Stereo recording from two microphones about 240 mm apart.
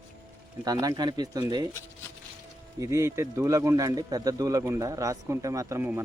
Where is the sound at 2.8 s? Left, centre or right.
Centre.